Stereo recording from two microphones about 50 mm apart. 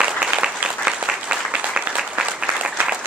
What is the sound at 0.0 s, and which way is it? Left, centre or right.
Applause, right.